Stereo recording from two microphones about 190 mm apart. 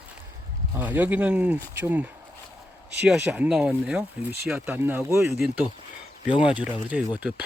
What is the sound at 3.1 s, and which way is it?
Speech, 5° right (ahead or behind).